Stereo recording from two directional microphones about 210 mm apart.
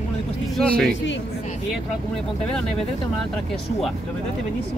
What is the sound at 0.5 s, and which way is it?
Speech, centre (ahead or behind).